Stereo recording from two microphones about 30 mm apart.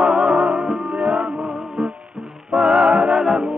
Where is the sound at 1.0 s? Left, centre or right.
Right.